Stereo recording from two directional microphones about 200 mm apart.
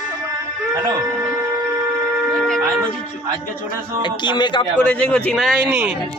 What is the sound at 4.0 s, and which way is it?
Speech, 25° left (ahead or behind).